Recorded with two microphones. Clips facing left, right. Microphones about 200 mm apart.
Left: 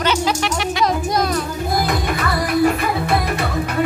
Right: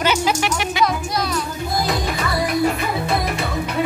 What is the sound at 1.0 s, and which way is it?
Music, 50° left (ahead or behind).